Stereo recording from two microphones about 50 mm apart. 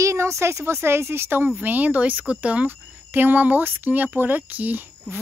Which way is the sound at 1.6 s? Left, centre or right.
Right.